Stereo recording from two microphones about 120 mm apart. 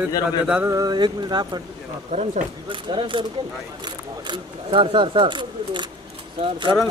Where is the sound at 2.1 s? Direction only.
80° right.